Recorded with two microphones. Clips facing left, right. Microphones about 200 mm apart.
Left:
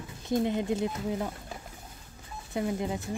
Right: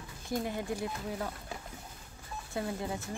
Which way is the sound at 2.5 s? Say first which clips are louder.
Left 5 dB; 20° left (ahead or behind).